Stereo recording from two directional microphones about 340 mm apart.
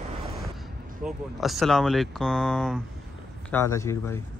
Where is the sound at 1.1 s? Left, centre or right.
Centre.